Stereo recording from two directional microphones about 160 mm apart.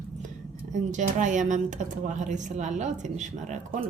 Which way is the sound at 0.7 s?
50° right (ahead or behind).